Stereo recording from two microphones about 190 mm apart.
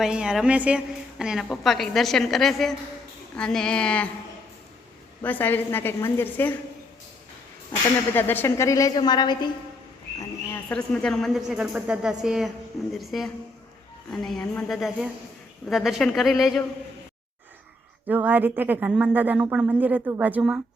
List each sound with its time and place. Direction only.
0.0 s a woman's voice: 5° right (ahead or behind)
5.2 s a woman's voice: 10° left (ahead or behind)
8.1 s a woman's voice: 10° left (ahead or behind)
10.7 s a woman's voice: 5° left (ahead or behind)
18.1 s speech: 10° right (ahead or behind)